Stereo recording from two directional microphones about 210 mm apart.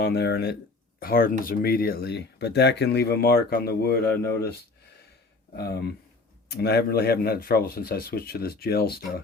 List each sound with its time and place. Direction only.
0.0 s speech: 50° left (ahead or behind)
5.5 s speech: 50° left (ahead or behind)